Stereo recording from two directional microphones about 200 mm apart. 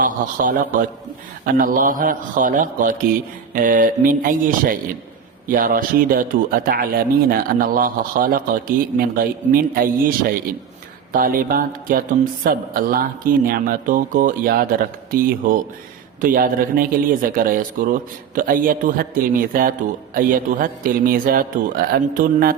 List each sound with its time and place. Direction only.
0.0 s a man's voice: 40° right (ahead or behind)